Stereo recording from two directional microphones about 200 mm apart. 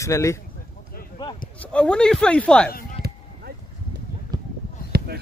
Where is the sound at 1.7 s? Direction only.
5° left (ahead or behind).